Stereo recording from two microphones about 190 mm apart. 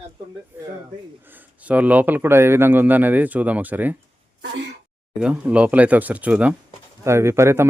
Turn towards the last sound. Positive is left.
turn(degrees=-15)  # may be behind; listen again after turning